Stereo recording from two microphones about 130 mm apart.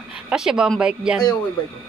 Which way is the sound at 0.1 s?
5° right (ahead or behind).